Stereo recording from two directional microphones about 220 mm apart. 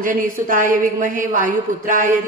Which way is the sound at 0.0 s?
35° right (ahead or behind).